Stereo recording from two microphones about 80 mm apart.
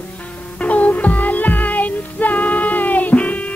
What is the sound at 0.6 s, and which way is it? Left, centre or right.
Music, centre.